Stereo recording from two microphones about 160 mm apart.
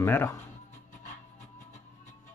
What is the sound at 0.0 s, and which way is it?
Speech, 15° left (ahead or behind).